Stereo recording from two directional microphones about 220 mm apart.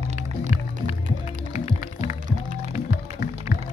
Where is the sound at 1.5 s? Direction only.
30° left (ahead or behind).